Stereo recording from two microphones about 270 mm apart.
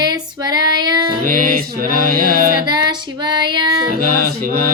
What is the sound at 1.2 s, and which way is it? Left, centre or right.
Music, right.